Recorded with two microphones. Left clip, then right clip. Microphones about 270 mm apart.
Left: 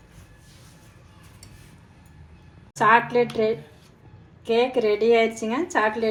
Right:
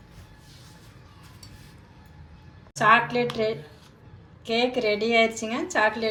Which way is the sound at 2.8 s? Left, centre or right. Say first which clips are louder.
Left 2 dB; centre.